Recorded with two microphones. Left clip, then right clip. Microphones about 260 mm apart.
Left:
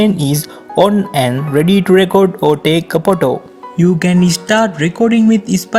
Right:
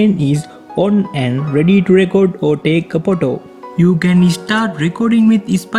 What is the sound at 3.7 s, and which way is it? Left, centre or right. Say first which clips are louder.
Speech: left 1 dB; centre.